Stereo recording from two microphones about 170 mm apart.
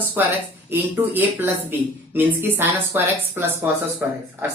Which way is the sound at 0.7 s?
10° right (ahead or behind).